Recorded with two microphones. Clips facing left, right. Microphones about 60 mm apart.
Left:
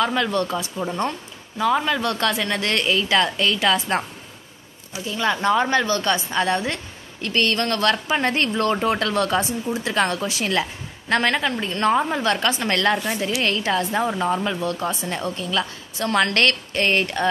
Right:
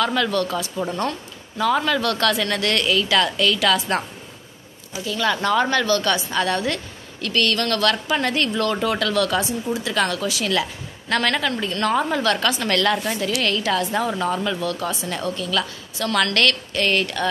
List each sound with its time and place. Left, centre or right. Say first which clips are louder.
0.0 s a woman's voice: even; left
5.0 s a woman's voice: left 1 dB; left